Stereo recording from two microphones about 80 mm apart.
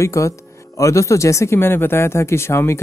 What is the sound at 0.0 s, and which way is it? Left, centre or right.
Speech, left.